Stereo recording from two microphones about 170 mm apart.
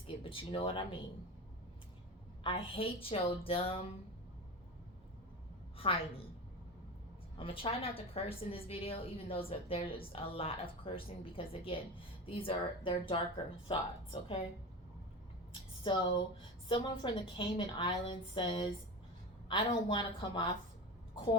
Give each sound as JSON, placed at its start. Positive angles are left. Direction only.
{"t": 0.2, "sound": "speech", "side_deg": 30}
{"t": 2.4, "sound": "a woman's voice", "side_deg": 30}
{"t": 5.7, "sound": "a woman's voice", "side_deg": 35}
{"t": 7.3, "sound": "a woman's voice", "side_deg": 30}
{"t": 15.8, "sound": "a woman's voice", "side_deg": 30}